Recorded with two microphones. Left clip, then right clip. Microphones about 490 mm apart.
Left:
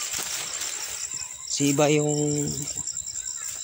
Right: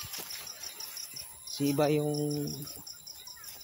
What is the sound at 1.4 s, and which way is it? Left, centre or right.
Speech, right.